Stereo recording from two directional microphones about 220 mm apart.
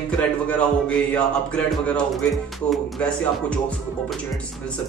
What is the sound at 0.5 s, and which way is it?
Speech, 5° left (ahead or behind).